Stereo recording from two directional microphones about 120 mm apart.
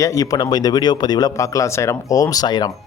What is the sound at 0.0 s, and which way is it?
A man's voice, 25° left (ahead or behind).